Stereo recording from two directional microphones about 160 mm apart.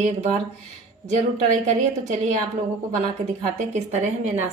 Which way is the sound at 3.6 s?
50° right (ahead or behind).